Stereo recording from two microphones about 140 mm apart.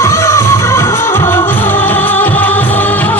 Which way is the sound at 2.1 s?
15° left (ahead or behind).